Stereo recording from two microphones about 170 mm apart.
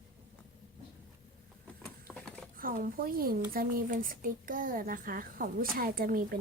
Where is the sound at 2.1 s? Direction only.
5° left (ahead or behind).